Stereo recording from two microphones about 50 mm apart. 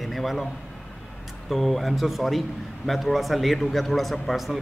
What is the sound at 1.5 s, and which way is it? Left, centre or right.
A man's voice, centre.